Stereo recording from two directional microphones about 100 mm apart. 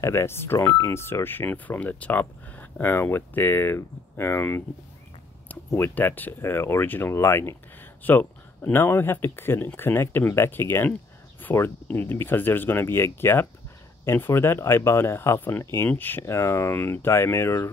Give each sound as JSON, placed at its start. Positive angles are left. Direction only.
{"t": 0.0, "sound": "speech", "side_deg": 25}
{"t": 5.8, "sound": "speech", "side_deg": 20}